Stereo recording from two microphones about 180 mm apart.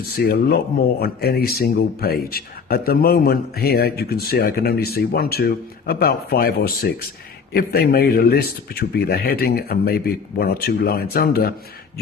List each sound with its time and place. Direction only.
0.3 s speech: 60° left (ahead or behind)